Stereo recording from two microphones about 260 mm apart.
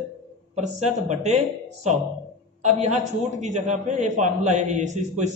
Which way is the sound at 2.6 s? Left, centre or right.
Right.